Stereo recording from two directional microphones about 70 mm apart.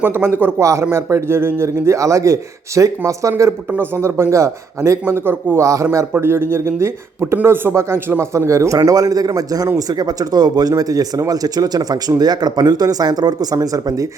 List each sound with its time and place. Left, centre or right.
0.0 s speech: right
0.6 s a man's voice: right
3.7 s speech: right
5.5 s speech: right
8.3 s a man's voice: right